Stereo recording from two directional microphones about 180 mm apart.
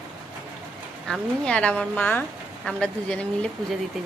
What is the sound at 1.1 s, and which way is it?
A woman's voice, 5° left (ahead or behind).